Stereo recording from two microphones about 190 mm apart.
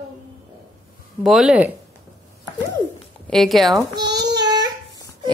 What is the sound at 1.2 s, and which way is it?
Speech, centre (ahead or behind).